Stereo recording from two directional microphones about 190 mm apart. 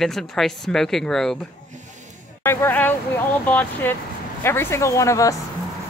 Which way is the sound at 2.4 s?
10° left (ahead or behind).